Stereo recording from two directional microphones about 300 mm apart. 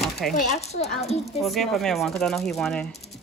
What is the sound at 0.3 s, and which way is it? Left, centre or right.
Speech, left.